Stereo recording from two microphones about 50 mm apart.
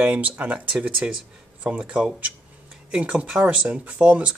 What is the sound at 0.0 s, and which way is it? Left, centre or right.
Speech, right.